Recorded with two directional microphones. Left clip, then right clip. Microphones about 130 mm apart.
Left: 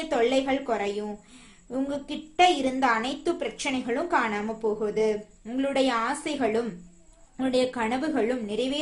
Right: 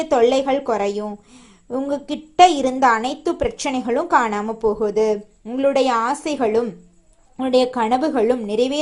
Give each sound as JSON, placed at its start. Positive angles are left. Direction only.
{"t": 0.1, "sound": "a woman's voice", "side_deg": -45}